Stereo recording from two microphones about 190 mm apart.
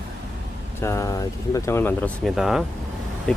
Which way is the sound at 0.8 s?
15° left (ahead or behind).